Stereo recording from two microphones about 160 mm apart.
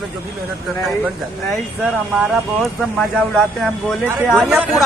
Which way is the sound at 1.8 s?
Centre (ahead or behind).